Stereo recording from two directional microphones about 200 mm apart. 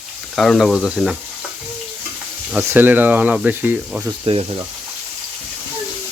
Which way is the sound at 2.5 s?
10° right (ahead or behind).